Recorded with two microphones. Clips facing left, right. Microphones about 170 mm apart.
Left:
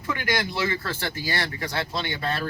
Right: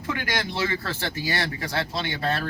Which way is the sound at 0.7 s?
25° right (ahead or behind).